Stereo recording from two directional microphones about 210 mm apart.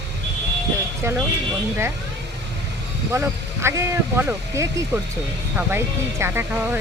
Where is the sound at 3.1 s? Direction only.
10° right (ahead or behind).